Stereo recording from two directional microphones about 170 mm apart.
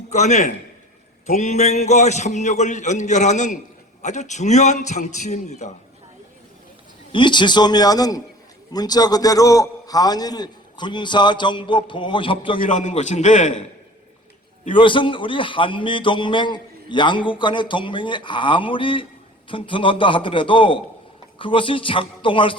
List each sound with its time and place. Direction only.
0.1 s a man's voice: 45° left (ahead or behind)
7.1 s a man's voice: 30° left (ahead or behind)
12.6 s a man's voice: 45° left (ahead or behind)
14.8 s a man's voice: 30° left (ahead or behind)